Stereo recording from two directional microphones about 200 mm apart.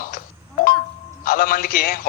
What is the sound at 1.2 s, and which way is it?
Speech, 45° left (ahead or behind).